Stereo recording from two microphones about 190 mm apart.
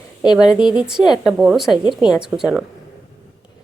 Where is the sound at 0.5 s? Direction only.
20° left (ahead or behind).